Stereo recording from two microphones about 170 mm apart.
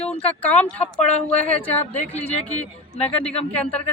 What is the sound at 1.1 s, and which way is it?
Speech, 40° left (ahead or behind).